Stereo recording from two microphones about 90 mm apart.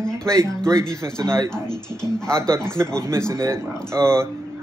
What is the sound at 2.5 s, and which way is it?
Speech, 30° right (ahead or behind).